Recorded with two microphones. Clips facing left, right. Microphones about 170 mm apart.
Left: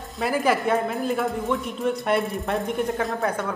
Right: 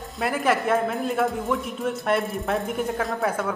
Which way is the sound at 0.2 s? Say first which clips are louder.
Left 1 dB; centre (ahead or behind).